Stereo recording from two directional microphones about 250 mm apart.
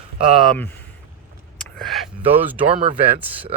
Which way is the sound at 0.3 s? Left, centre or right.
Centre.